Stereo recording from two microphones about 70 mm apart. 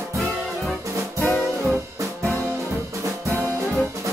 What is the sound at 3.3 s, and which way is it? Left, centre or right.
Brass instrument, right.